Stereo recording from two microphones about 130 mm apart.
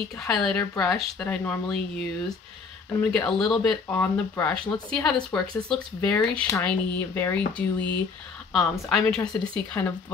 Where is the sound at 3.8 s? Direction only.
15° left (ahead or behind).